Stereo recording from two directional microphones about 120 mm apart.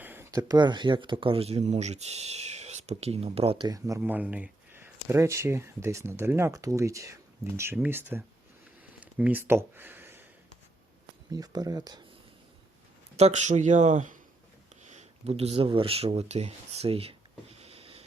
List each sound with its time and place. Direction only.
0.0 s a sound: 15° right (ahead or behind)
0.3 s speech: 30° right (ahead or behind); by 3.6 s 55° right (ahead or behind)
3.6 s speech: 30° right (ahead or behind)
4.0 s speech: 15° right (ahead or behind)
9.0 s a sound: 10° right (ahead or behind)
11.3 s speech: 35° right (ahead or behind)
13.1 s speech: 70° right (ahead or behind)
14.8 s speech: 65° right (ahead or behind)
17.6 s a sound: 55° right (ahead or behind)